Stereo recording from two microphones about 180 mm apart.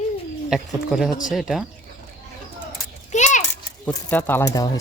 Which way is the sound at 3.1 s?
40° left (ahead or behind).